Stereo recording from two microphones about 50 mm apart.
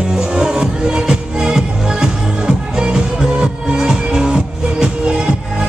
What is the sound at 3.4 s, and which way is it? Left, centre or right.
Music, centre.